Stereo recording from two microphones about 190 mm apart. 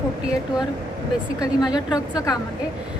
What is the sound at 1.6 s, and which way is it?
Speech, 20° left (ahead or behind).